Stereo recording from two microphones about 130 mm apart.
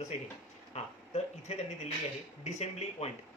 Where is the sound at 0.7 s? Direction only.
55° left (ahead or behind).